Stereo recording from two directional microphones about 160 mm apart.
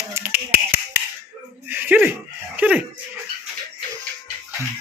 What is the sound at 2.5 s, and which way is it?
Dog, 10° right (ahead or behind).